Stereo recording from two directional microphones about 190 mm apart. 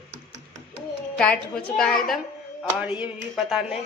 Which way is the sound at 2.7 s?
5° right (ahead or behind).